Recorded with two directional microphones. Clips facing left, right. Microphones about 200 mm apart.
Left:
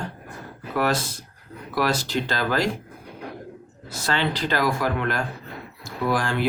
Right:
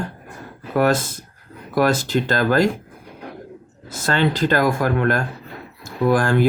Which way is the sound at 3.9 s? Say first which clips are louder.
Right 5 dB; 50° right (ahead or behind).